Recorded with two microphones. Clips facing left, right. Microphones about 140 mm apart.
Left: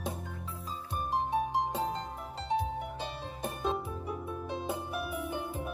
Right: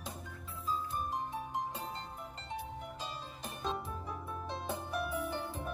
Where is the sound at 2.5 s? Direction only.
60° left (ahead or behind).